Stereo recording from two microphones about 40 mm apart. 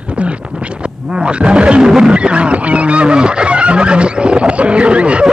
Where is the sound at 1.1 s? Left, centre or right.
Right.